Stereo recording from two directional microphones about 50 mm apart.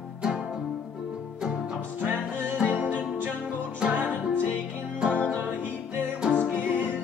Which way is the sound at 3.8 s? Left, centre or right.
Centre.